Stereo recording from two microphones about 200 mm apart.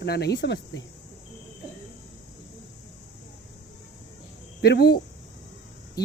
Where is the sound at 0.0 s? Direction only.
55° left (ahead or behind).